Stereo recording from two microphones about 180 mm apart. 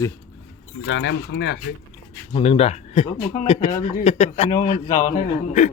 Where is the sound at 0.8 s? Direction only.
90° left; by 1.6 s 70° left (ahead or behind).